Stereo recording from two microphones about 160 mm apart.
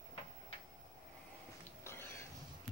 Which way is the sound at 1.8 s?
15° left (ahead or behind).